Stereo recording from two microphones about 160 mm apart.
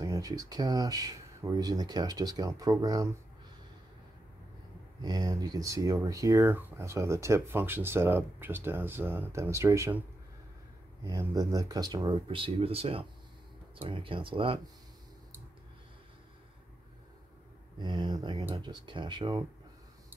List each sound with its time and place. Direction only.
0.0 s speech: 20° right (ahead or behind)
5.0 s speech: 25° right (ahead or behind)
11.1 s speech: 20° right (ahead or behind)
17.7 s speech: 30° right (ahead or behind)